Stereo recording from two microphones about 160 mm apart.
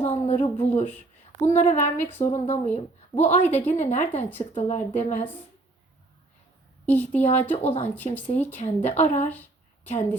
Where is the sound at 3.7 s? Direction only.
45° left (ahead or behind).